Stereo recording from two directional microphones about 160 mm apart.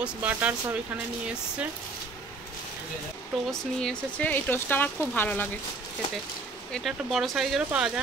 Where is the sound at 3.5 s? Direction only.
5° left (ahead or behind).